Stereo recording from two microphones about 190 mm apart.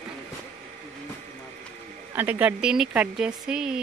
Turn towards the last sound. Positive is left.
turn(degrees=-5)  # may be behind; listen again after turning